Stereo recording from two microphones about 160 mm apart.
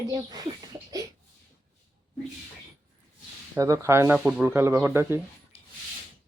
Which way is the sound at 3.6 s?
20° right (ahead or behind).